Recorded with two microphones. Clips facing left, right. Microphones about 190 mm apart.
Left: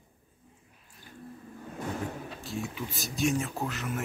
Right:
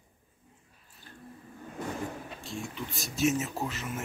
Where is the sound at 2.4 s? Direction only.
Centre (ahead or behind).